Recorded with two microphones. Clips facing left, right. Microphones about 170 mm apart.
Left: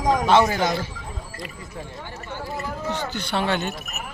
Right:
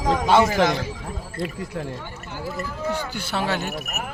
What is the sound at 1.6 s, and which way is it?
Speech, 75° right (ahead or behind).